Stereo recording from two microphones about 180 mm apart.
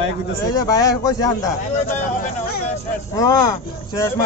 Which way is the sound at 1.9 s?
45° left (ahead or behind).